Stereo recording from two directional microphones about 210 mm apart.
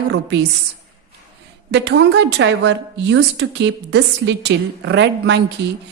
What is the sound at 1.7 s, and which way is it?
A woman's voice, 55° right (ahead or behind).